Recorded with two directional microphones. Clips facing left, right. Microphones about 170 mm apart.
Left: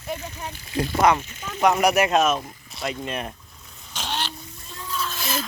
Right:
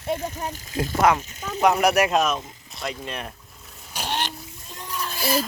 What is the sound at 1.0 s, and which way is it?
Speech, centre (ahead or behind).